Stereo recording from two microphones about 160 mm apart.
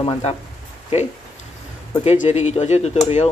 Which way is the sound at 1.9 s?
35° left (ahead or behind).